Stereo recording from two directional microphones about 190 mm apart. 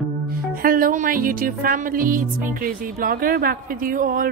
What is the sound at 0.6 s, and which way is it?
Music, 50° right (ahead or behind).